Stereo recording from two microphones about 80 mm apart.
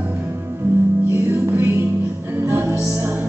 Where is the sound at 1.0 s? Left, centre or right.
Right.